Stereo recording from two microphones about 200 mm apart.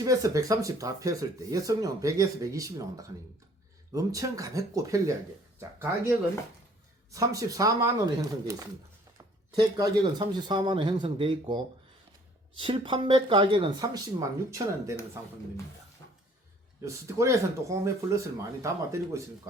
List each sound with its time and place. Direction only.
0.0 s speech: 15° right (ahead or behind)
7.1 s speech: 15° right (ahead or behind)
16.0 s a sound: 65° right (ahead or behind)
16.8 s speech: 15° right (ahead or behind)